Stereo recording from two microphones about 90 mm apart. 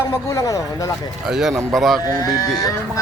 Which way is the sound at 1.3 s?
5° right (ahead or behind).